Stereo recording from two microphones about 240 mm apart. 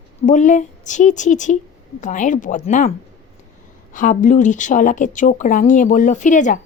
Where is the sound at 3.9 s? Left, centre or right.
Left.